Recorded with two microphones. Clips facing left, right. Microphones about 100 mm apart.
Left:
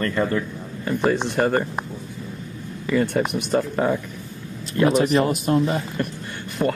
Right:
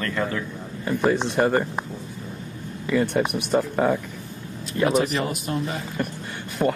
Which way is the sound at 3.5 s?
Centre (ahead or behind).